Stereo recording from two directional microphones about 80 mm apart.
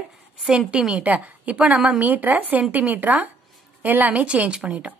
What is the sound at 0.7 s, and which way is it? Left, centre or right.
A woman's voice, centre.